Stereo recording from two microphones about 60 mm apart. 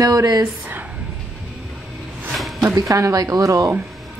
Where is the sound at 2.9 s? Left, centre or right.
Right.